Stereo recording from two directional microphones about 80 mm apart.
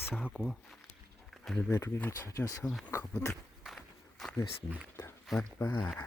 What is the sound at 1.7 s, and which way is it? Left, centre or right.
Speech, left.